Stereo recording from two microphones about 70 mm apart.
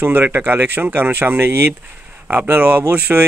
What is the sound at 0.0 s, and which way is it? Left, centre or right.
Speech, right.